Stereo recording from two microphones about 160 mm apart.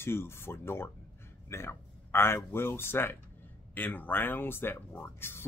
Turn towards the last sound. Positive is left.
turn(degrees=15)  # may be behind; listen again after turning